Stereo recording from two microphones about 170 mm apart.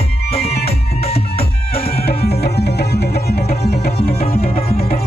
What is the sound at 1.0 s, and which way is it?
Music, 35° left (ahead or behind).